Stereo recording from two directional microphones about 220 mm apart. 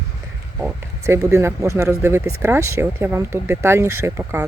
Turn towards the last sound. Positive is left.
turn(degrees=-10)  # may be behind; listen again after turning